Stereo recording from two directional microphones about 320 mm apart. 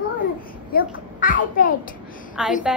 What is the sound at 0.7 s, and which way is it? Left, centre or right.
A child's voice, left.